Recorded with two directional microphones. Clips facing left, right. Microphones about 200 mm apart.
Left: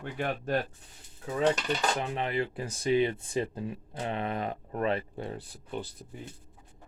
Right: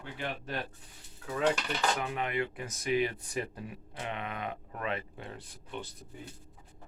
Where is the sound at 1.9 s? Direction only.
30° left (ahead or behind).